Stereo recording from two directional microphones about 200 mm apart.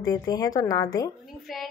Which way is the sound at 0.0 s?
20° left (ahead or behind).